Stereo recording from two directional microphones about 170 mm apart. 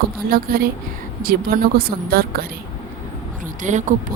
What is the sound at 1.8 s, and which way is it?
Speech, 60° right (ahead or behind).